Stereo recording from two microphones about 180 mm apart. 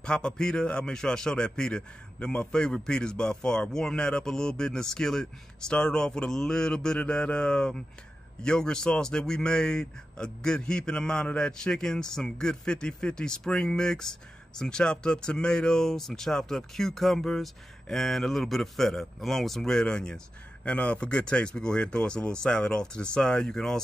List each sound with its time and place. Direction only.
0.0 s speech: 5° left (ahead or behind)